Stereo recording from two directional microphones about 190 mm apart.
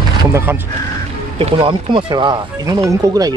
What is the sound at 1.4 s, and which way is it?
Speech, 30° right (ahead or behind).